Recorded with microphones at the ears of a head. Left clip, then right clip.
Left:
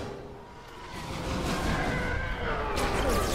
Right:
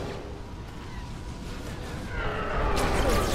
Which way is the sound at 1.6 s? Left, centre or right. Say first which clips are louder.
Left 8 dB; left.